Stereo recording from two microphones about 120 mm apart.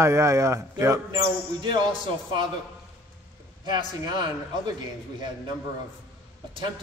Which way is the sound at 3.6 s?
35° right (ahead or behind).